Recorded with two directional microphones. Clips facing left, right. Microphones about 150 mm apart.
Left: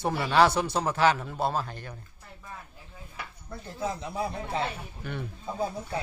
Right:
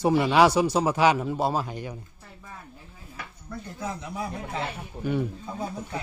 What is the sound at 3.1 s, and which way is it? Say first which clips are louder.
Speech: right 3 dB; 25° left (ahead or behind).